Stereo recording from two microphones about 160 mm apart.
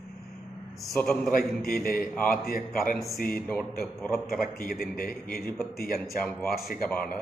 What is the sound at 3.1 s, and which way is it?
Speech, 65° left (ahead or behind).